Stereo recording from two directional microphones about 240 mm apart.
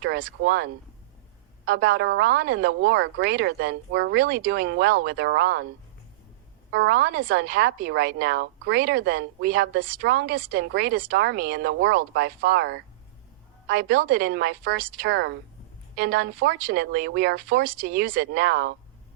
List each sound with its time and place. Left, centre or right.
0.0 s speech: right
6.7 s speech: right